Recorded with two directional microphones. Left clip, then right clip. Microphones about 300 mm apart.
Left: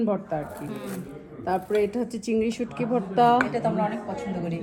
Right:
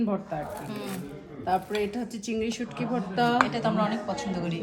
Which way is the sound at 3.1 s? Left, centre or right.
Left.